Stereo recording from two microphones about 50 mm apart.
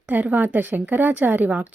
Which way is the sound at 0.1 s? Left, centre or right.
Right.